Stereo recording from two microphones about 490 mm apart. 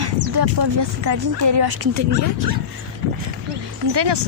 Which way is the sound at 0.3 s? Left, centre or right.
Right.